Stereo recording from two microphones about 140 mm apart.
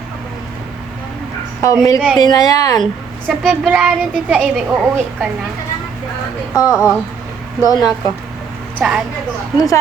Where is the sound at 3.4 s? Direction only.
5° right (ahead or behind).